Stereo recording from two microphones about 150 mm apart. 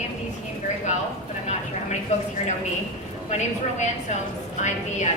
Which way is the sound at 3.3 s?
50° left (ahead or behind).